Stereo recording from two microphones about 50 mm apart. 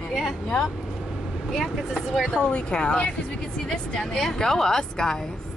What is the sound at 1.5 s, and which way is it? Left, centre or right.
Speech, centre.